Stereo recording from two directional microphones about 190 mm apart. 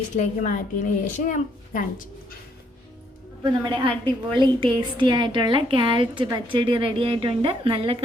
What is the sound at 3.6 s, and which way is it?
A woman's voice, 25° right (ahead or behind).